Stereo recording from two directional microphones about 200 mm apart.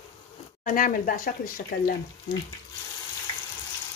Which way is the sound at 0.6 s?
45° left (ahead or behind).